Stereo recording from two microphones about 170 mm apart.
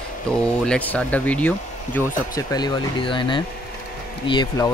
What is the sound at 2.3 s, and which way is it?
Speech, 25° left (ahead or behind).